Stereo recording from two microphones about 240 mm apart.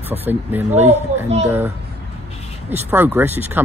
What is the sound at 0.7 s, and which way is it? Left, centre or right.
Speech, right.